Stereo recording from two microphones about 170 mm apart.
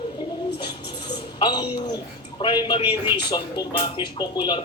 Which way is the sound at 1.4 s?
25° left (ahead or behind).